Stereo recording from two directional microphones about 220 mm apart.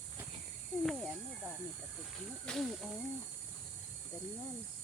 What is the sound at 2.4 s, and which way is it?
Speech, centre (ahead or behind).